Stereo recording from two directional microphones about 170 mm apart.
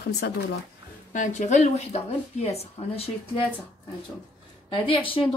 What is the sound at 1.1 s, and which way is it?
Speech, 45° left (ahead or behind).